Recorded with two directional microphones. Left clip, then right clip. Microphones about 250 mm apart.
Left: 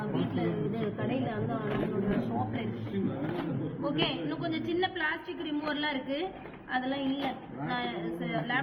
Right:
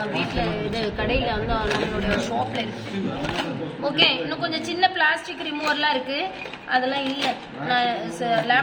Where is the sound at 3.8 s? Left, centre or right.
Right.